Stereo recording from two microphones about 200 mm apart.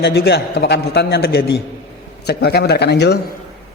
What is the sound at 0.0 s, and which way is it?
A man's voice, 55° left (ahead or behind).